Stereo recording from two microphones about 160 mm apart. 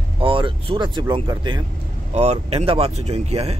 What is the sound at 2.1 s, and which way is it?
Speech, 40° right (ahead or behind).